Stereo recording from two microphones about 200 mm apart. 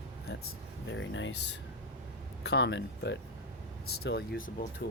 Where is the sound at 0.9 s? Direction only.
70° left (ahead or behind).